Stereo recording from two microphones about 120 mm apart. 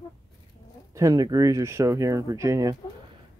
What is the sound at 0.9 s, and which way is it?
Speech, 30° right (ahead or behind).